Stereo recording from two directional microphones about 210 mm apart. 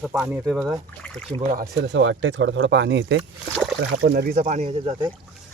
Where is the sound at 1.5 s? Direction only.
55° right (ahead or behind).